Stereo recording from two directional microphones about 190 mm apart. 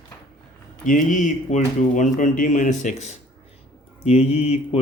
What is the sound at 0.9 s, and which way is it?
Speech, 45° left (ahead or behind).